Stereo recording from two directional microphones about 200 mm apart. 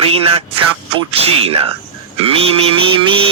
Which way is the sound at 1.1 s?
30° right (ahead or behind).